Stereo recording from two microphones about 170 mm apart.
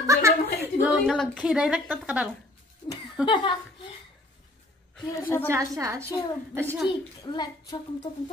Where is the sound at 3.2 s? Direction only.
30° left (ahead or behind).